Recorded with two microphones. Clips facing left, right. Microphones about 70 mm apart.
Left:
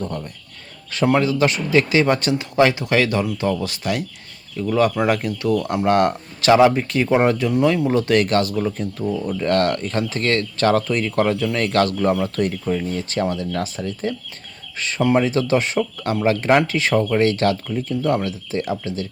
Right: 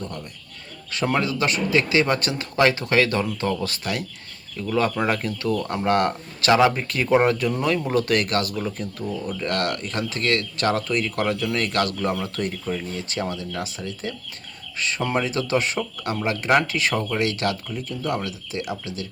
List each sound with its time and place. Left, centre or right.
0.9 s speech: left
12.7 s speech: centre
13.0 s speech: left
16.9 s speech: centre
17.2 s speech: left